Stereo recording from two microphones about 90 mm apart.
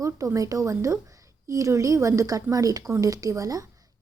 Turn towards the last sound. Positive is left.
turn(degrees=-40)  # may be behind; listen again after turning